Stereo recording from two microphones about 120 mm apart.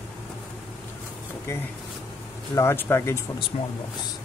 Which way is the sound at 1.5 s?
25° left (ahead or behind).